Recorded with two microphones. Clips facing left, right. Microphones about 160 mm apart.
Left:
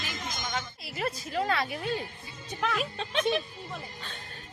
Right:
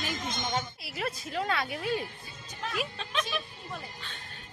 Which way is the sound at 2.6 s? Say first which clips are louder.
Left 7 dB; 70° left (ahead or behind).